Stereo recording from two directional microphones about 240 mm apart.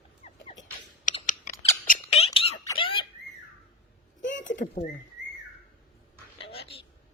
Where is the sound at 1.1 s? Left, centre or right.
Left.